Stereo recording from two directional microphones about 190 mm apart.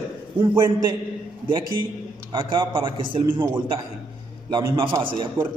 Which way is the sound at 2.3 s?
25° right (ahead or behind).